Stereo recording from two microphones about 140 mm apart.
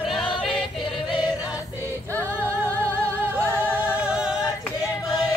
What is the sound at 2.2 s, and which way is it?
Music, 20° right (ahead or behind).